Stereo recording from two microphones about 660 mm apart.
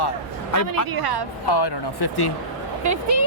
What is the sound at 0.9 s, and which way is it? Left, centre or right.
Speech, right.